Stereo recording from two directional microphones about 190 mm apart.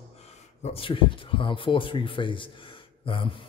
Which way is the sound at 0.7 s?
25° left (ahead or behind).